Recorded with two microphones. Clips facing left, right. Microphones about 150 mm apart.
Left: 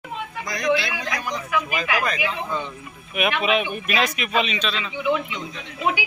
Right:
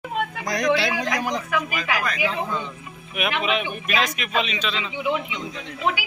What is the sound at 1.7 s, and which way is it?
Speech, 25° left (ahead or behind).